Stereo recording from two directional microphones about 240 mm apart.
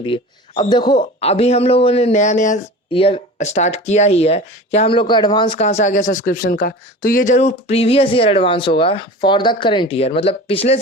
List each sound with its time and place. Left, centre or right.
0.0 s speech: left